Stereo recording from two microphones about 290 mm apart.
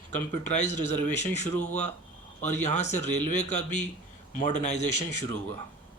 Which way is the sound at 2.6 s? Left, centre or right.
Left.